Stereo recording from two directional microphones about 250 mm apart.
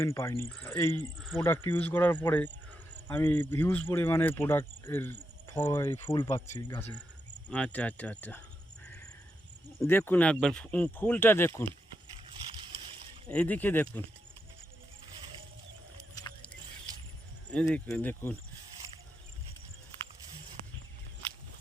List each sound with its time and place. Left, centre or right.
0.0 s speech: centre
9.8 s speech: centre
13.2 s speech: centre
16.1 s a sound: centre
16.9 s a sound: centre
17.5 s speech: centre